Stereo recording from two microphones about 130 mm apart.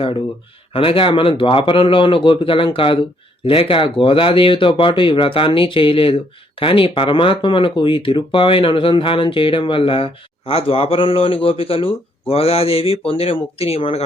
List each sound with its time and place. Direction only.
0.7 s speech: 45° left (ahead or behind)